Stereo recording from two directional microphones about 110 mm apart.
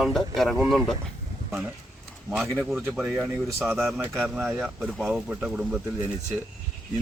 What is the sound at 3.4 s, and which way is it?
Speech, 20° right (ahead or behind).